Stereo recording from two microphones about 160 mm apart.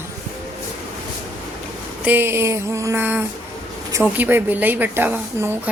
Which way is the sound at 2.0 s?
15° right (ahead or behind).